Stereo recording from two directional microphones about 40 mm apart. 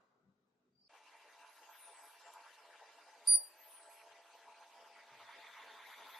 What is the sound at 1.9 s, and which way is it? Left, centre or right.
Vehicle, centre.